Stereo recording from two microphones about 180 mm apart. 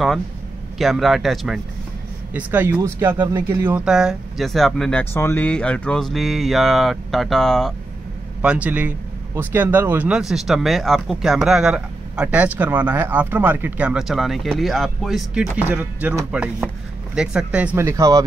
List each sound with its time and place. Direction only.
0.7 s speech: centre (ahead or behind)
2.3 s speech: 10° right (ahead or behind)
3.8 s speech: 5° right (ahead or behind)